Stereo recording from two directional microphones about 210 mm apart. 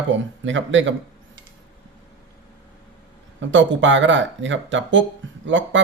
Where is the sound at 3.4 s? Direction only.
60° right (ahead or behind).